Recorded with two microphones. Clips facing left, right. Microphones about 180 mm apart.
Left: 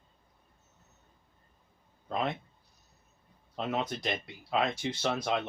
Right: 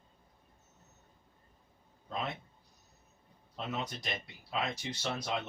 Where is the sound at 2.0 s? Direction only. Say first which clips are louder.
Left 6 dB; 65° left (ahead or behind).